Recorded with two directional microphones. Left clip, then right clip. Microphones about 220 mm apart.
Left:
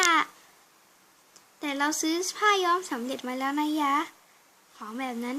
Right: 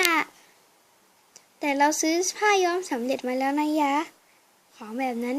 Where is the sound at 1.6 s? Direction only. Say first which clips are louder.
Right 6 dB; 25° right (ahead or behind).